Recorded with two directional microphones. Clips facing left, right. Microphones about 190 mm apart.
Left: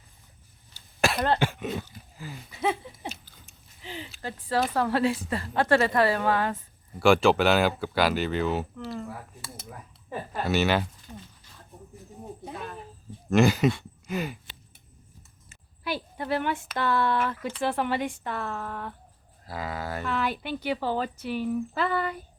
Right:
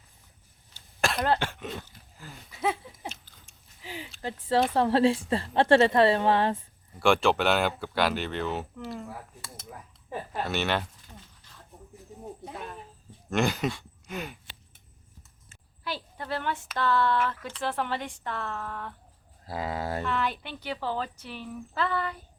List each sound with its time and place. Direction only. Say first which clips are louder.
0.7 s cough: left 3 dB; 5° left (ahead or behind)
1.4 s a sound: left 6 dB; 10° left (ahead or behind)
3.8 s speech: left 1 dB; 10° right (ahead or behind)
4.2 s a woman's voice: right 2 dB; 20° right (ahead or behind)
7.0 s speech: left 3 dB; centre (ahead or behind)
11.1 s a sound: left 7 dB; 5° left (ahead or behind)
13.3 s speech: left 6 dB; centre (ahead or behind)
15.4 s a sound: left 4 dB; 10° left (ahead or behind)
16.7 s speech: right 1 dB; 15° left (ahead or behind)
19.5 s a woman's voice: right 2 dB; 25° right (ahead or behind)
20.1 s speech: left 2 dB; 5° left (ahead or behind)